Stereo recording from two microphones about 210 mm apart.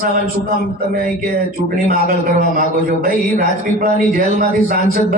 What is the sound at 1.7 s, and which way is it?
A man's voice, 45° right (ahead or behind).